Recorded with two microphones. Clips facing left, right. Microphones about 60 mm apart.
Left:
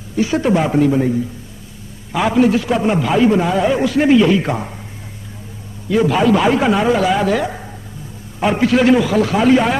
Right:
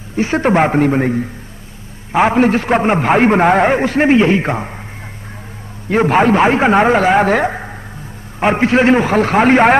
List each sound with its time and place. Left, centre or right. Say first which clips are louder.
0.1 s a man's voice: right 2 dB; right
5.9 s a man's voice: right 2 dB; right